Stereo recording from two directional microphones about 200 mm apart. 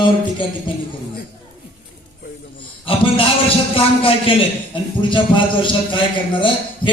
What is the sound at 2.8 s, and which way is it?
A man's voice, 25° left (ahead or behind).